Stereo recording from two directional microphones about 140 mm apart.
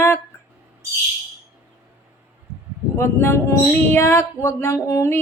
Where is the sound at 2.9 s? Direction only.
15° left (ahead or behind).